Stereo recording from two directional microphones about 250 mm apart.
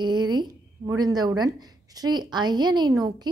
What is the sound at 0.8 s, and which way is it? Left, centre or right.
A woman's voice, centre.